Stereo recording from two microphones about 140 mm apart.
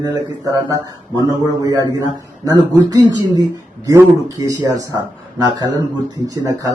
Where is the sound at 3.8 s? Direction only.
25° right (ahead or behind).